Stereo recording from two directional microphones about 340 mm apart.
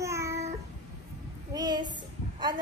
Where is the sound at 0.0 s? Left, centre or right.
Centre.